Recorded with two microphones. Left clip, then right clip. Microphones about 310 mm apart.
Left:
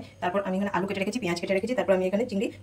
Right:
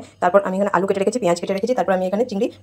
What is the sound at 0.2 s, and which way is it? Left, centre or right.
Speech, right.